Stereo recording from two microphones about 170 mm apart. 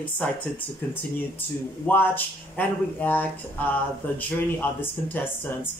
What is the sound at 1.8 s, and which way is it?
Speech, 10° left (ahead or behind).